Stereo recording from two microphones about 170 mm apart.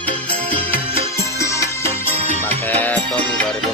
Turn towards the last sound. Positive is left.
turn(degrees=10)  # may be behind; listen again after turning